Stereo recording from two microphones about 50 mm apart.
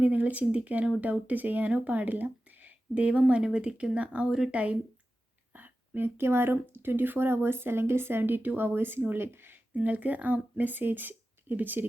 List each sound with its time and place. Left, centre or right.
0.0 s speech: right
5.5 s a sound: right
6.1 s speech: right
9.8 s speech: right